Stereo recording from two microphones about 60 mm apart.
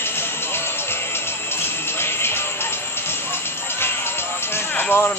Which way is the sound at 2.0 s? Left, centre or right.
Left.